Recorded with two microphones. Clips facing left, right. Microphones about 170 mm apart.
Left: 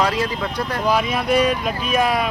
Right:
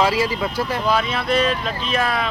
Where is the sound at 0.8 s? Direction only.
10° left (ahead or behind).